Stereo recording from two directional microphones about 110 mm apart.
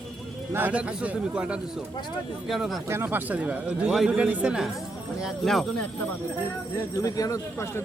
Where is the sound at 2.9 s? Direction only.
20° right (ahead or behind).